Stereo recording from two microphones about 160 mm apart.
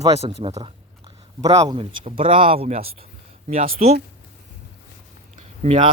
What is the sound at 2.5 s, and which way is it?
Speech, 40° right (ahead or behind).